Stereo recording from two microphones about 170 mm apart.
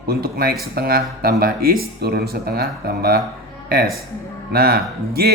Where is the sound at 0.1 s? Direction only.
65° right (ahead or behind).